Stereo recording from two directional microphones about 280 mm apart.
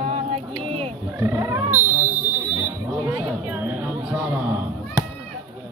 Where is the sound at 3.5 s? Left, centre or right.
Centre.